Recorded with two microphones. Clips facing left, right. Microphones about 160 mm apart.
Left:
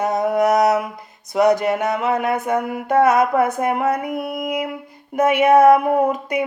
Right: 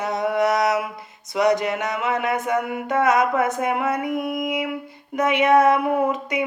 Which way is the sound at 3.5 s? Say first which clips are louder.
Left 3 dB; 45° left (ahead or behind).